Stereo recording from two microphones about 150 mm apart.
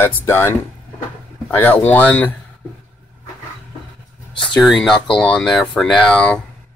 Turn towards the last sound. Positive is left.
turn(degrees=10)  # may be behind; listen again after turning